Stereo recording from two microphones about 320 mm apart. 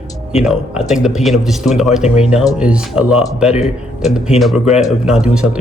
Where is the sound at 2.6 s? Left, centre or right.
Centre.